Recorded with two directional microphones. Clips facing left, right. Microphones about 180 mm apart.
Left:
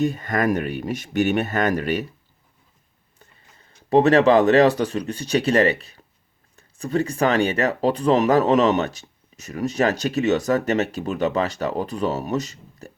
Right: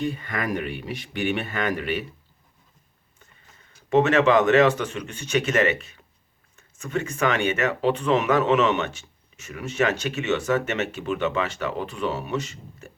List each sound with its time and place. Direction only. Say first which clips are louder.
0.0 s speech: left 6 dB; 45° left (ahead or behind)
3.6 s speech: left 3 dB; 35° left (ahead or behind)